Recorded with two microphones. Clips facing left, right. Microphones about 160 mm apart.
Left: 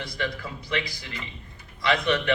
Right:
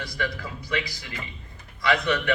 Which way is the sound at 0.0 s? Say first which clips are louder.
Even; 25° left (ahead or behind).